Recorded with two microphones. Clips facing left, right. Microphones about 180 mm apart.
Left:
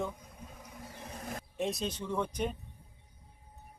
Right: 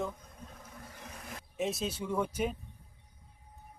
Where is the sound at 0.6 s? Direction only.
15° left (ahead or behind).